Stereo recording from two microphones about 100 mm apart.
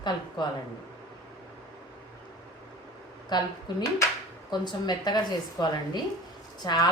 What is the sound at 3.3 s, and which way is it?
A woman's voice, 45° left (ahead or behind).